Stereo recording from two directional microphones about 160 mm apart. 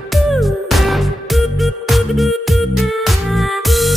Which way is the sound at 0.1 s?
Centre (ahead or behind).